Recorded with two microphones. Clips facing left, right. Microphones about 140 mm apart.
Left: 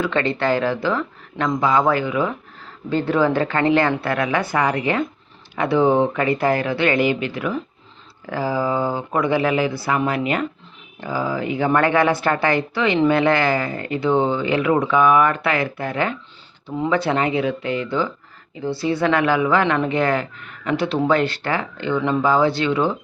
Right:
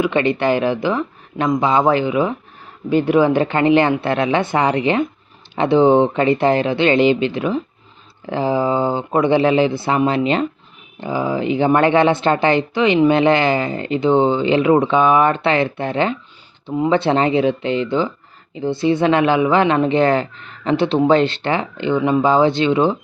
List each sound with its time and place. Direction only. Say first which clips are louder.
0.0 s speech: right 4 dB; 15° right (ahead or behind)